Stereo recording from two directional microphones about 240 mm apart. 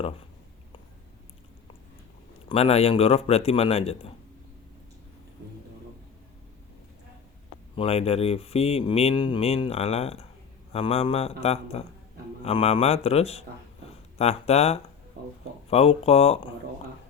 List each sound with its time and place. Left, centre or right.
2.5 s speech: left
7.8 s speech: left